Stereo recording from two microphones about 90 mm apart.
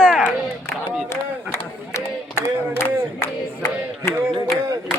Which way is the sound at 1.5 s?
30° left (ahead or behind).